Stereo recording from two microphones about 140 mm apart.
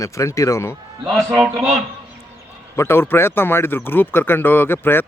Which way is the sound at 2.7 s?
15° left (ahead or behind).